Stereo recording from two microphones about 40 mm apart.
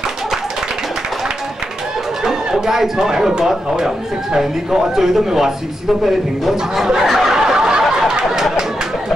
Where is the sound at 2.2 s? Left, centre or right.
Centre.